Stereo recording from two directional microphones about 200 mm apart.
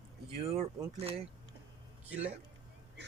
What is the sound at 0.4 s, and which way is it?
Speech, 30° right (ahead or behind).